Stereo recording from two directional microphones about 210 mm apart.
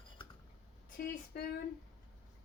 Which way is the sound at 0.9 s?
50° left (ahead or behind).